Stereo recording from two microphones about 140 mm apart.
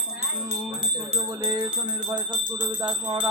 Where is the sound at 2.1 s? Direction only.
35° right (ahead or behind).